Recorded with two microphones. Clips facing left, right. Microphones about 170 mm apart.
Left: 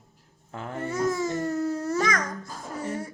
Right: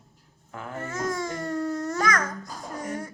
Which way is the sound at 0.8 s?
10° left (ahead or behind).